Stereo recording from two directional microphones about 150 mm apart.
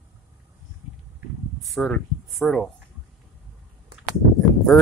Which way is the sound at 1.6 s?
5° left (ahead or behind).